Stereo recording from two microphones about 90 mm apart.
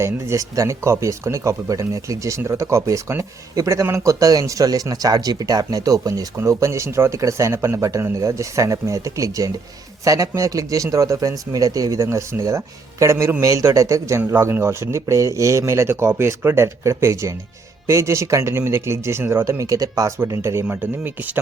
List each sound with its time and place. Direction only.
0.0 s speech: 35° right (ahead or behind)
20.7 s speech: 20° right (ahead or behind)